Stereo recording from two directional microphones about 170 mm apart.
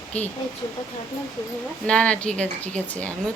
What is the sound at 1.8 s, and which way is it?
Speech, 5° left (ahead or behind).